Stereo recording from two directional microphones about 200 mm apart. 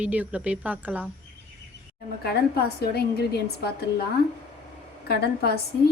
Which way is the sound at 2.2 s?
50° left (ahead or behind).